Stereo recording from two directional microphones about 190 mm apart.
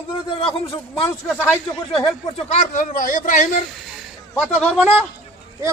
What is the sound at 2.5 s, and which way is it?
A man's voice, 40° left (ahead or behind).